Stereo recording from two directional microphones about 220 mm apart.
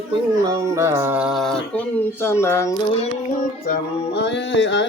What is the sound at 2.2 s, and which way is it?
Speech, 10° left (ahead or behind).